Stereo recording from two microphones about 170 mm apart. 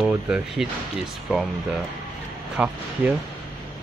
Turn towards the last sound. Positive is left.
turn(degrees=-5)  # may be behind; listen again after turning